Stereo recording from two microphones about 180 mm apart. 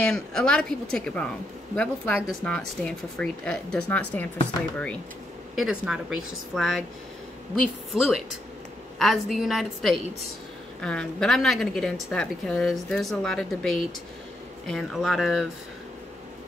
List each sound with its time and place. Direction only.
0.0 s a woman's voice: 5° left (ahead or behind)
5.6 s a woman's voice: 5° right (ahead or behind)
7.9 s a woman's voice: centre (ahead or behind)